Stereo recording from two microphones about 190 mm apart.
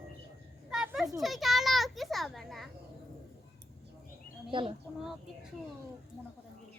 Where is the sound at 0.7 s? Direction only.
5° right (ahead or behind).